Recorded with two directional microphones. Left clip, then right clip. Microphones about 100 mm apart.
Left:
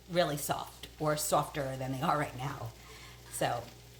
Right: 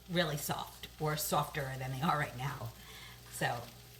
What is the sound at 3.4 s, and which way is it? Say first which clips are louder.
Speech: left 3 dB; 50° left (ahead or behind).